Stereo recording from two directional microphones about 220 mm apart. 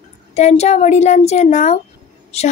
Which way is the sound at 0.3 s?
30° left (ahead or behind).